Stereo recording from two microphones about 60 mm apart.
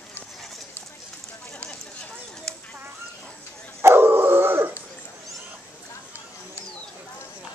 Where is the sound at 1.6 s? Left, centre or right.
Centre.